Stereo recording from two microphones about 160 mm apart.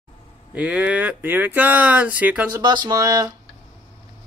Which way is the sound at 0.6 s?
10° right (ahead or behind).